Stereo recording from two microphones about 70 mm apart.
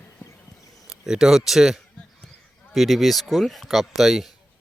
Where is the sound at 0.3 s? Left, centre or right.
Left.